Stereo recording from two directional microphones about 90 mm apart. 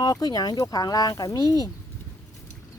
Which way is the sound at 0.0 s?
45° left (ahead or behind).